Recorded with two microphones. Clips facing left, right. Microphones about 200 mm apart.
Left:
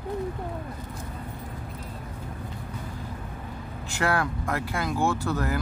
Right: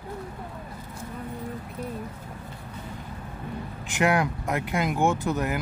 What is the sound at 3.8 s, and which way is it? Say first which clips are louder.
Speech: right 3 dB; 20° right (ahead or behind).